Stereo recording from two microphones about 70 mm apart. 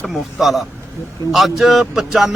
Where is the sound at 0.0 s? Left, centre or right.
Centre.